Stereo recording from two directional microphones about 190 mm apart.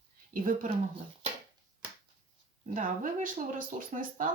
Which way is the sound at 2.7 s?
45° right (ahead or behind).